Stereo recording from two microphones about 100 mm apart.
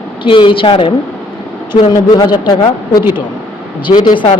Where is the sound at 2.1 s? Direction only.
45° left (ahead or behind).